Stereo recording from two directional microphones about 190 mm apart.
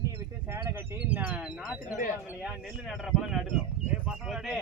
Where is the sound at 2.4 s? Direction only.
Centre (ahead or behind).